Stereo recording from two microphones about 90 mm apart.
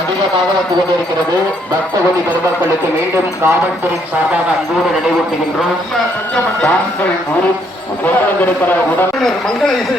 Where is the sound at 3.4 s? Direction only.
30° right (ahead or behind).